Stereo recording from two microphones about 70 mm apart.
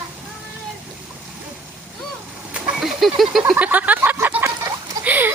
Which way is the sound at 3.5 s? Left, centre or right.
Right.